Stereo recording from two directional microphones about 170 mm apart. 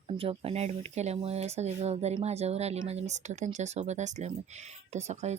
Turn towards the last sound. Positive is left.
turn(degrees=-40)  # may be behind; listen again after turning